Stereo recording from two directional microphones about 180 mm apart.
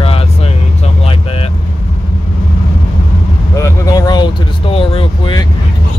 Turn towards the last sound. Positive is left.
turn(degrees=30)  # may be behind; listen again after turning